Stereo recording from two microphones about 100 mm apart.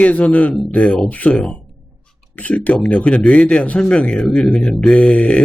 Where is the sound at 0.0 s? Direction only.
15° left (ahead or behind).